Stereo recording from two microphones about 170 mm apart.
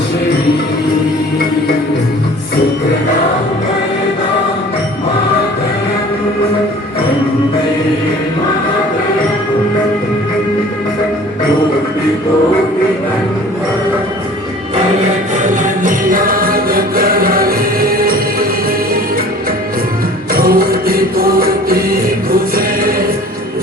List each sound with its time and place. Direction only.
15.4 s music: 50° right (ahead or behind)
20.3 s music: 60° right (ahead or behind)